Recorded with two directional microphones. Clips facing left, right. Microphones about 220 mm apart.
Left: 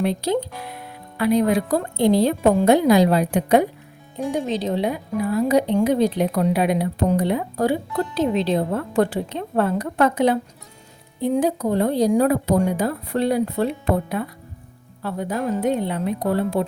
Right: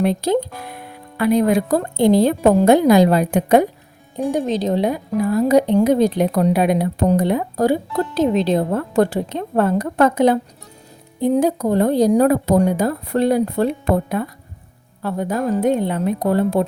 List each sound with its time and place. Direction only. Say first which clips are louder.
0.0 s a woman's voice: right 4 dB; 45° right (ahead or behind)